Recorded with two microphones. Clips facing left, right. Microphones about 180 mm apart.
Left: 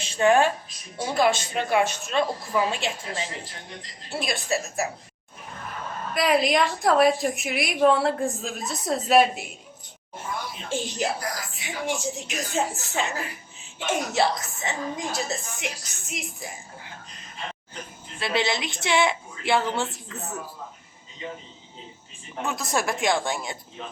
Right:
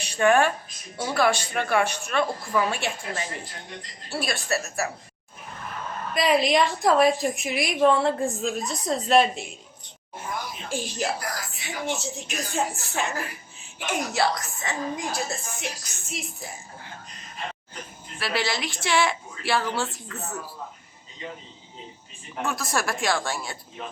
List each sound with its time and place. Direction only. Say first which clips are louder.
0.0 s a woman's voice: left 1 dB; 20° left (ahead or behind)
6.1 s a woman's voice: even; centre (ahead or behind)
10.7 s a woman's voice: left 1 dB; 20° left (ahead or behind)
18.2 s a woman's voice: left 2 dB; 20° left (ahead or behind)
22.4 s a woman's voice: left 1 dB; 20° left (ahead or behind)